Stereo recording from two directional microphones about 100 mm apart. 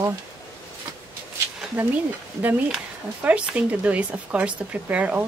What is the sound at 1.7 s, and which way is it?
Speech, 20° right (ahead or behind).